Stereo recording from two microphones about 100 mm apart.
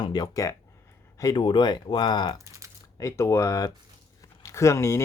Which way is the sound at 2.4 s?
30° right (ahead or behind).